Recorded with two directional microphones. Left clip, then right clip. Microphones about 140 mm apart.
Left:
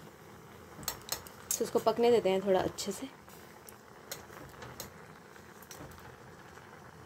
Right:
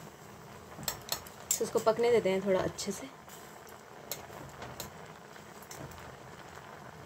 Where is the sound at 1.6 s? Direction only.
15° left (ahead or behind).